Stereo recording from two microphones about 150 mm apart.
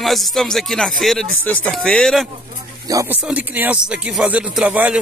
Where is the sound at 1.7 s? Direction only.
5° left (ahead or behind).